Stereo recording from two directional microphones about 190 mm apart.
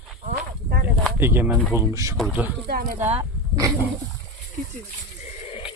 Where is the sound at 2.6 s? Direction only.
50° right (ahead or behind).